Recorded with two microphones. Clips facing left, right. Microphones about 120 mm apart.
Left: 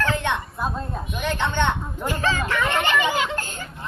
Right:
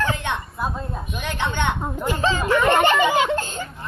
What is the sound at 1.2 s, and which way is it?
A woman's voice, 15° right (ahead or behind).